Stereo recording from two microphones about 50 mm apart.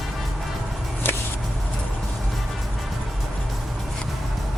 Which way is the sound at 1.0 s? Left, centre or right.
Left.